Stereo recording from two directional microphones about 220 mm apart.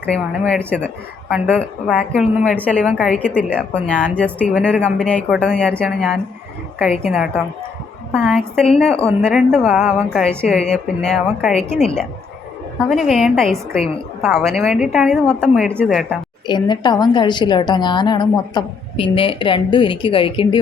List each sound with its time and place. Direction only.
0.0 s a woman's voice: 5° left (ahead or behind)
3.9 s a woman's voice: 10° right (ahead or behind)
4.5 s a woman's voice: 5° left (ahead or behind)
12.9 s a woman's voice: centre (ahead or behind)
16.5 s a woman's voice: 20° left (ahead or behind)